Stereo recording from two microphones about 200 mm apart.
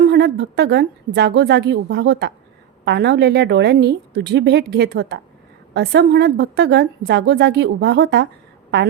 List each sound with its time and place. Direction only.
0.0 s a woman's voice: 55° right (ahead or behind)